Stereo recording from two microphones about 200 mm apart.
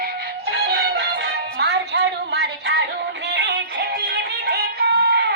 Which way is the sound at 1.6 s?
60° right (ahead or behind).